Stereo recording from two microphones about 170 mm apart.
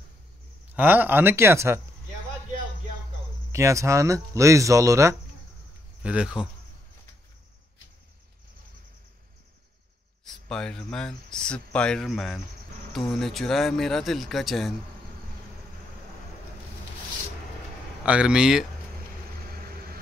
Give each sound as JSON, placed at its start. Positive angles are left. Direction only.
{"t": 0.7, "sound": "speech", "side_deg": -10}
{"t": 3.5, "sound": "speech", "side_deg": -15}
{"t": 6.0, "sound": "speech", "side_deg": -5}
{"t": 10.2, "sound": "speech", "side_deg": 5}
{"t": 18.0, "sound": "speech", "side_deg": -5}